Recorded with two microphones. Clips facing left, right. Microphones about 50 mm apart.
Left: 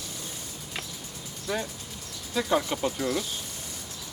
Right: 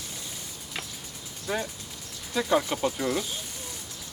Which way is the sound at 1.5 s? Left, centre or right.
Right.